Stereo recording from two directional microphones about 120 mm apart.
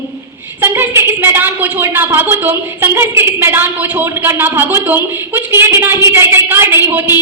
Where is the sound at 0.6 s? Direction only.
20° right (ahead or behind).